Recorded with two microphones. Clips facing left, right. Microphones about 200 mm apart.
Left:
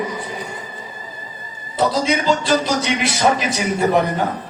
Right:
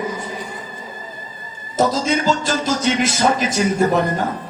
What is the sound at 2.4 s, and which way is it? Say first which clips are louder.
Speech: left 1 dB; 45° right (ahead or behind).